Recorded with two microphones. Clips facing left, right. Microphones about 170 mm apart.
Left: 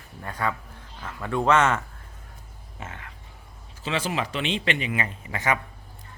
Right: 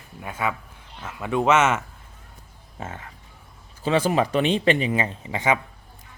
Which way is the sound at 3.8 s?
45° right (ahead or behind).